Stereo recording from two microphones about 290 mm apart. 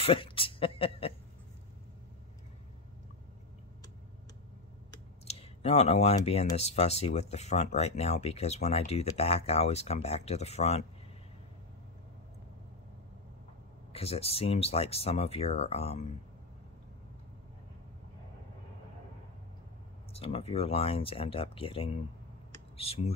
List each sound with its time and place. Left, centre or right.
0.0 s speech: centre
4.9 s speech: left
13.9 s speech: centre
20.1 s speech: centre